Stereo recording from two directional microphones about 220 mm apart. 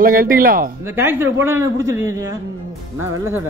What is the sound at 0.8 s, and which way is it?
A man's voice, 10° right (ahead or behind).